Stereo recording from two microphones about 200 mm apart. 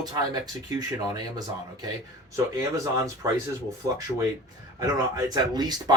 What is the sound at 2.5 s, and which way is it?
Speech, 15° right (ahead or behind).